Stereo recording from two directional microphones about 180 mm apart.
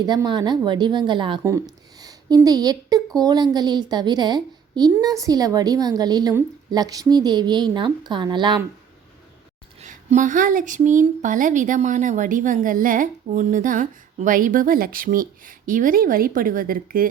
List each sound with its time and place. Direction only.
0.0 s a woman's voice: 20° right (ahead or behind)
9.8 s speech: 45° right (ahead or behind)